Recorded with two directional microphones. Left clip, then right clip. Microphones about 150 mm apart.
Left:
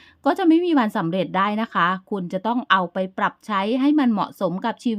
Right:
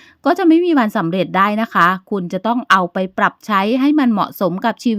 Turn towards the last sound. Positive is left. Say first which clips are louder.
# right 6 dB
turn(degrees=-30)  # may be behind; listen again after turning